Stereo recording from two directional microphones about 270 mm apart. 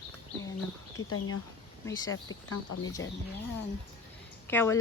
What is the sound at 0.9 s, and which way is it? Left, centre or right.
Speech, left.